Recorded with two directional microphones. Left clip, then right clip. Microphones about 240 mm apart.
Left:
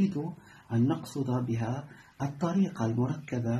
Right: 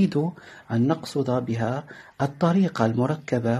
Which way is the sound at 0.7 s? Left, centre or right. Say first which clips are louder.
Right 6 dB; right.